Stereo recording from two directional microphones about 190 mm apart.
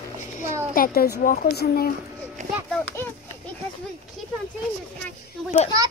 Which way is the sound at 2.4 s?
40° right (ahead or behind).